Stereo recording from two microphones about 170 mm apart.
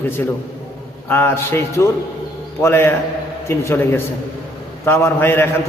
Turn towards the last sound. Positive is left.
turn(degrees=15)  # may be behind; listen again after turning